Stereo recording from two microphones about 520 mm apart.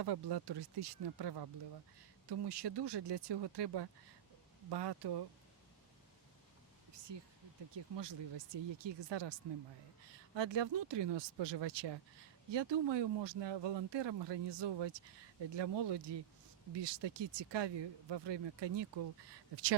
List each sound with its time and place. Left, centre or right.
0.0 s speech: right
7.1 s speech: right
10.3 s speech: right